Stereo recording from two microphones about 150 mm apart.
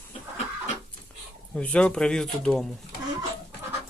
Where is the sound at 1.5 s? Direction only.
5° left (ahead or behind).